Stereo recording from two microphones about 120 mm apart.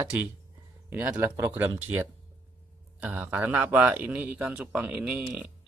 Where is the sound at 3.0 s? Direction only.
15° right (ahead or behind).